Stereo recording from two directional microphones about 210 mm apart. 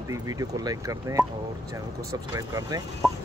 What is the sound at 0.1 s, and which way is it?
Speech, 15° right (ahead or behind).